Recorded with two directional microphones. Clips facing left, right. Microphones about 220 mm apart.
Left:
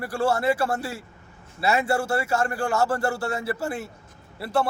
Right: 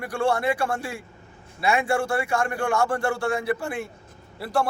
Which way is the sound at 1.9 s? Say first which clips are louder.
Even; 5° left (ahead or behind).